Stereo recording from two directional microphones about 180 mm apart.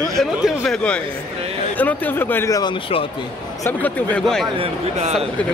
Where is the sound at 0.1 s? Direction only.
Centre (ahead or behind); by 3.1 s 30° left (ahead or behind).